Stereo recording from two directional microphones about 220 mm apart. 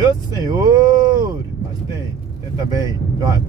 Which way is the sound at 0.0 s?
20° right (ahead or behind).